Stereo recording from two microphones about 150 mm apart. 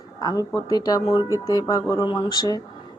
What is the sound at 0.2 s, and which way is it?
A woman's voice, 25° left (ahead or behind).